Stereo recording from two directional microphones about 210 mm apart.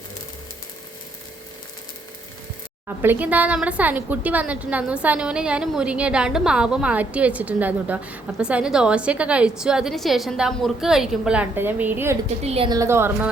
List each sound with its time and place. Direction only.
2.8 s a woman's voice: 10° right (ahead or behind)
12.4 s a woman's voice: 30° right (ahead or behind); by 13.2 s 10° right (ahead or behind)